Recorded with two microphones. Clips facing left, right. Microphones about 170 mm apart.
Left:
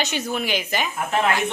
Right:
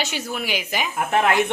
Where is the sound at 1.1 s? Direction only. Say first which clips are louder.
Right 3 dB; 60° right (ahead or behind).